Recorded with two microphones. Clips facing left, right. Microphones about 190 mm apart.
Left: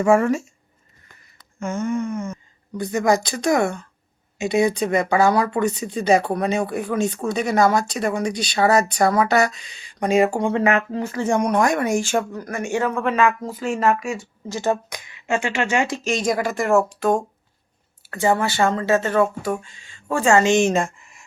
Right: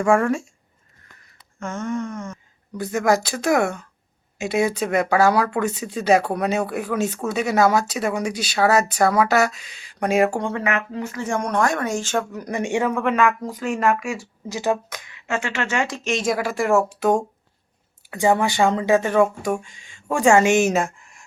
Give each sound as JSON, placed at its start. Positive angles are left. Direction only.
{"t": 0.0, "sound": "speech", "side_deg": 5}
{"t": 1.5, "sound": "speech", "side_deg": 10}
{"t": 10.6, "sound": "speech", "side_deg": 30}
{"t": 11.3, "sound": "speech", "side_deg": 15}
{"t": 12.3, "sound": "speech", "side_deg": -15}
{"t": 12.9, "sound": "speech", "side_deg": 0}
{"t": 14.8, "sound": "speech", "side_deg": 15}
{"t": 15.9, "sound": "speech", "side_deg": 0}
{"t": 18.1, "sound": "speech", "side_deg": -15}